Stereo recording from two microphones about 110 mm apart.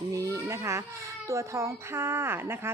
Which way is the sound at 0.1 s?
30° right (ahead or behind).